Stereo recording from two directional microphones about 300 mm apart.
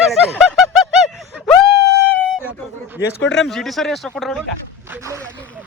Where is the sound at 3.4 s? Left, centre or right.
Centre.